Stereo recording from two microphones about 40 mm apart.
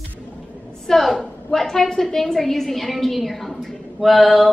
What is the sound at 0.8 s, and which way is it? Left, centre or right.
A woman's voice, centre.